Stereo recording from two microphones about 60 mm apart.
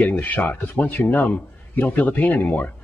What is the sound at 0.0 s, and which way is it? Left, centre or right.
Speech, left.